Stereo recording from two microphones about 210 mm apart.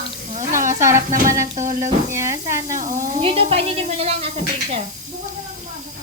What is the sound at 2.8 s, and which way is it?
Music, 40° right (ahead or behind).